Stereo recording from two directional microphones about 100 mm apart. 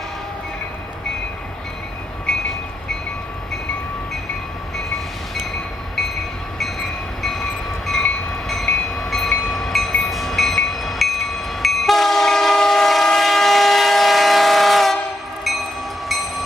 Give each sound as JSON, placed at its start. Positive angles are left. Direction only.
{"t": 4.7, "sound": "train", "side_deg": 5}
{"t": 7.2, "sound": "train", "side_deg": 5}
{"t": 16.1, "sound": "train", "side_deg": 0}